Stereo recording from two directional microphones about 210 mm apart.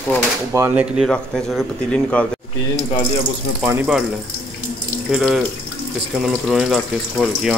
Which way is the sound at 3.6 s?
10° right (ahead or behind).